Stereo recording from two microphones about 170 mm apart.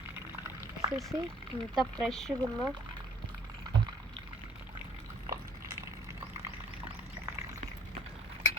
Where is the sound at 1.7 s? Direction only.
Centre (ahead or behind).